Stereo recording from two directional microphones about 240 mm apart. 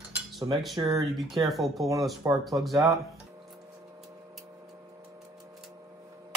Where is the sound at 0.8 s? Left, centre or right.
Right.